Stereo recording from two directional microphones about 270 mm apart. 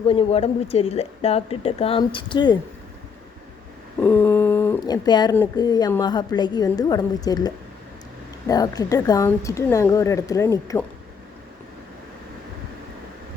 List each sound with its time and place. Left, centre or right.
0.1 s speech: left
4.0 s speech: centre